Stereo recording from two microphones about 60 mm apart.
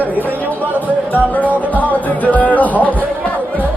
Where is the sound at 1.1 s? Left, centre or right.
Left.